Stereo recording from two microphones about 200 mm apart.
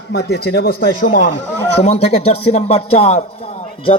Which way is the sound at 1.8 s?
35° left (ahead or behind).